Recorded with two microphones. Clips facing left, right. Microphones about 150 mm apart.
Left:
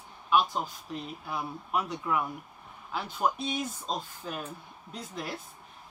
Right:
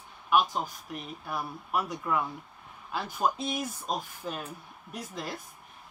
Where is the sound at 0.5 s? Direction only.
15° right (ahead or behind).